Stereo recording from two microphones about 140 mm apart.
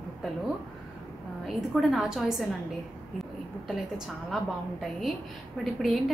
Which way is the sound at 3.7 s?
Centre (ahead or behind).